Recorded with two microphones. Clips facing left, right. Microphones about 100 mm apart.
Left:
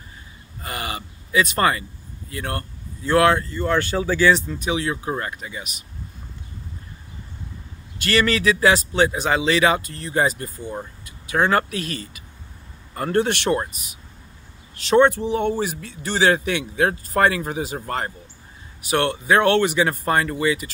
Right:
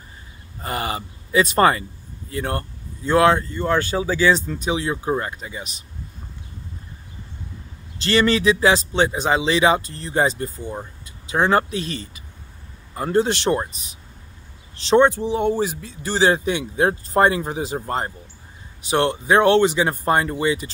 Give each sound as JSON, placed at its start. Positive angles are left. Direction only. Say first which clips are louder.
{"t": 0.6, "sound": "speech", "louder": "right 4 dB", "side_deg": -35}
{"t": 4.6, "sound": "speech", "louder": "right 2 dB", "side_deg": -30}
{"t": 8.0, "sound": "speech", "louder": "right 2 dB", "side_deg": -25}
{"t": 12.9, "sound": "speech", "louder": "right 1 dB", "side_deg": -15}
{"t": 15.0, "sound": "speech", "louder": "even", "side_deg": -20}